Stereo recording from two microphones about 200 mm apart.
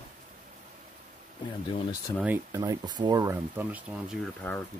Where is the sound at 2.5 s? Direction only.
20° right (ahead or behind).